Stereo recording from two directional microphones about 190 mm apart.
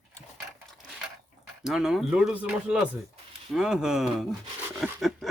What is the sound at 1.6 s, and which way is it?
Speech, centre (ahead or behind).